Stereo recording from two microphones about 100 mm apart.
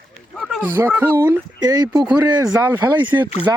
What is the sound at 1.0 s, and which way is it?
Speech, 20° right (ahead or behind).